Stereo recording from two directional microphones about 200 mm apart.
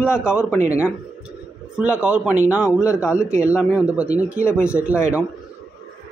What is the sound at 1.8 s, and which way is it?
Speech, 10° right (ahead or behind).